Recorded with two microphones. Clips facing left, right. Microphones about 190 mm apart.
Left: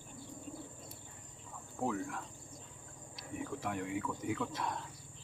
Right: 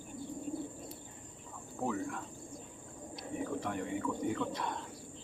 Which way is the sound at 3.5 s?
Centre (ahead or behind).